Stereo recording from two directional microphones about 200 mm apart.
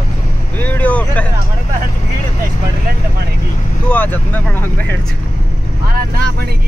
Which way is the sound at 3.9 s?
10° left (ahead or behind).